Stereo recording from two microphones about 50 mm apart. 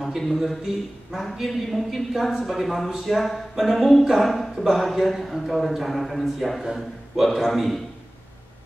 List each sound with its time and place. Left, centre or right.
0.0 s a man's voice: centre